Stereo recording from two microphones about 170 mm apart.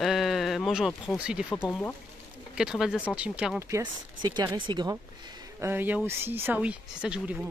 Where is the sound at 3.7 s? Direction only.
25° right (ahead or behind).